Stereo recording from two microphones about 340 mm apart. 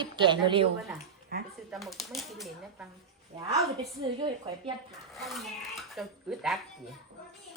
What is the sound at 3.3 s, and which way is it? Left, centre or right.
A woman's voice, centre.